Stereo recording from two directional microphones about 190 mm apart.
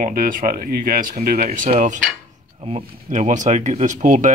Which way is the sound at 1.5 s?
35° right (ahead or behind).